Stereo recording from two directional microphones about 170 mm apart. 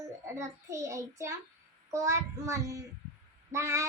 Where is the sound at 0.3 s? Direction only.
20° right (ahead or behind).